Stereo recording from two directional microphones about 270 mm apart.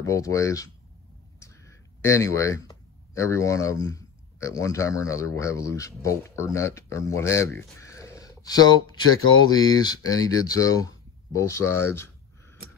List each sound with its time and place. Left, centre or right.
0.0 s speech: centre
9.0 s speech: left
9.5 s speech: centre